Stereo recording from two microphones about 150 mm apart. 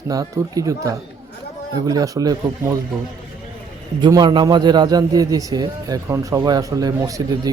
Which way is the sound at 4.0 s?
30° right (ahead or behind).